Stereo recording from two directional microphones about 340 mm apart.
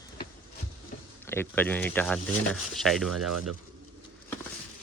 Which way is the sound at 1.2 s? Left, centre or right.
Centre.